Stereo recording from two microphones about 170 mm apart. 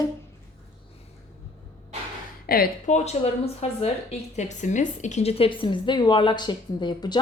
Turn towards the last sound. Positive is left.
turn(degrees=25)  # may be behind; listen again after turning